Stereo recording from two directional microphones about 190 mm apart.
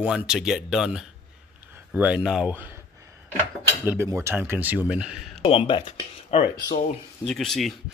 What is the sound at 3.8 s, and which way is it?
Speech, 15° right (ahead or behind).